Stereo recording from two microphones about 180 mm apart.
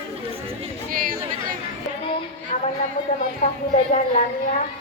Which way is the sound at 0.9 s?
50° right (ahead or behind).